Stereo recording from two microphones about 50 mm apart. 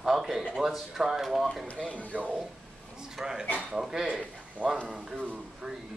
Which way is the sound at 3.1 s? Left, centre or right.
Centre.